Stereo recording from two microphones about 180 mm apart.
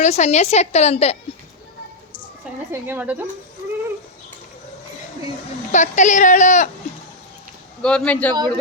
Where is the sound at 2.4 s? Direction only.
10° right (ahead or behind).